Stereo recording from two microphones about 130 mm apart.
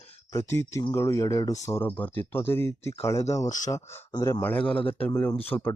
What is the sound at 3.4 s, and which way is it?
Speech, 70° left (ahead or behind).